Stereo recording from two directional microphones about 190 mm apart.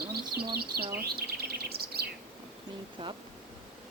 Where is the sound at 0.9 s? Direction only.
55° right (ahead or behind).